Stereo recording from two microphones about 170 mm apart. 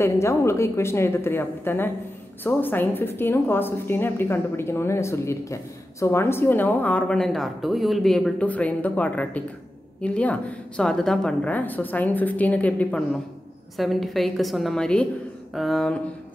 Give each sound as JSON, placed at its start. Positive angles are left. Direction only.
{"t": 0.0, "sound": "a woman's voice", "side_deg": 15}